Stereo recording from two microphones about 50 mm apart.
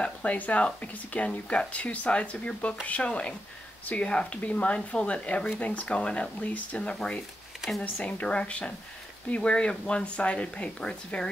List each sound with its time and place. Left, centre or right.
0.0 s speech: left
6.8 s speech: left